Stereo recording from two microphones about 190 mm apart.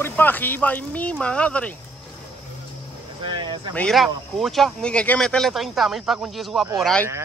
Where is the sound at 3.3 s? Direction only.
25° right (ahead or behind).